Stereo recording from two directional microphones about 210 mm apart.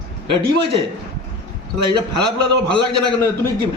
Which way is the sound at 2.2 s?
20° right (ahead or behind).